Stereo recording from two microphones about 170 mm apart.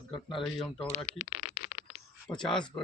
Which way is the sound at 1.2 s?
40° right (ahead or behind).